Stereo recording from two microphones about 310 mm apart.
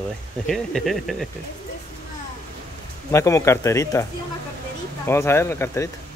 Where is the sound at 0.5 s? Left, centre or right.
Centre.